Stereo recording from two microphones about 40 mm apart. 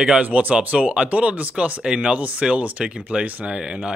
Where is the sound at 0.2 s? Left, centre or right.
Right.